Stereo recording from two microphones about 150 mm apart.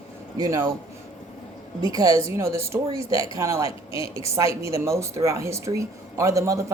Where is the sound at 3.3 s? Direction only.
20° right (ahead or behind).